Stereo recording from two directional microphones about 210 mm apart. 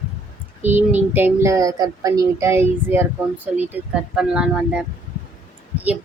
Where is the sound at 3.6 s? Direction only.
5° right (ahead or behind).